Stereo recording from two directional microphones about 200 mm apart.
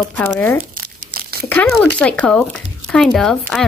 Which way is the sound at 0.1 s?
10° left (ahead or behind).